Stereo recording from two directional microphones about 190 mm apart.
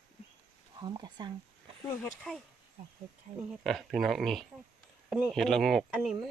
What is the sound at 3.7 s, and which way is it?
Speech, centre (ahead or behind).